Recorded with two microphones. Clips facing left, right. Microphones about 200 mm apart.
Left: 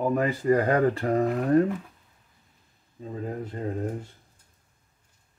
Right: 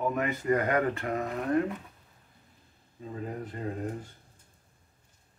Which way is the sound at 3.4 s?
25° left (ahead or behind).